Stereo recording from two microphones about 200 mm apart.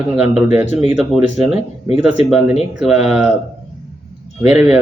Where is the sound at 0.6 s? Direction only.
35° left (ahead or behind).